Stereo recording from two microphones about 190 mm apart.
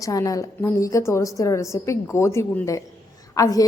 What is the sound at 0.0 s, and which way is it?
A woman's voice, 20° left (ahead or behind).